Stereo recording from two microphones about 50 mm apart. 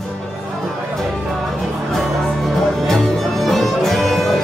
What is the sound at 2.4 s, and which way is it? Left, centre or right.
Music, centre.